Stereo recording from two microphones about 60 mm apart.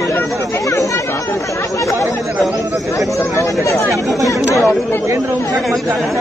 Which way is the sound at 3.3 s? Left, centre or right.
Left.